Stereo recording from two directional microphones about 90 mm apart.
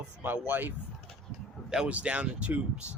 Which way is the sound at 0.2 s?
20° right (ahead or behind).